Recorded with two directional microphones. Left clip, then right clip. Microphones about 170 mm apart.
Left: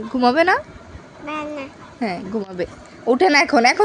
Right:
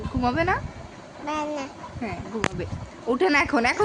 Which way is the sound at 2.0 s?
50° left (ahead or behind).